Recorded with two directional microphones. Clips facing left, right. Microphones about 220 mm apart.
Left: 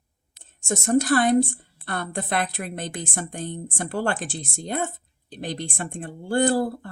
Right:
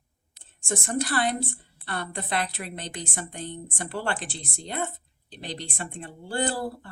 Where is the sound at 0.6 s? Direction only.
45° left (ahead or behind).